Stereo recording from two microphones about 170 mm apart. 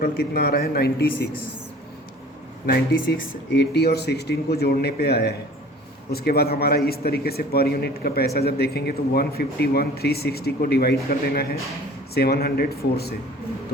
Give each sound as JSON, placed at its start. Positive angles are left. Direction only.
{"t": 0.0, "sound": "a man's voice", "side_deg": 65}
{"t": 2.6, "sound": "a man's voice", "side_deg": 75}
{"t": 12.1, "sound": "a man's voice", "side_deg": 70}